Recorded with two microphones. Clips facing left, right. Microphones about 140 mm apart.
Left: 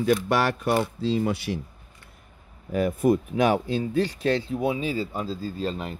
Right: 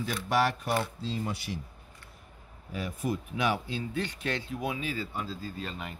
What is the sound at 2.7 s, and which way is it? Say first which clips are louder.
Speech: left 12 dB; 55° left (ahead or behind).